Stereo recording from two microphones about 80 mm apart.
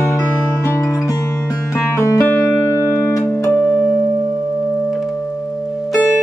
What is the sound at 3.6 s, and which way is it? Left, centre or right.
Music, centre.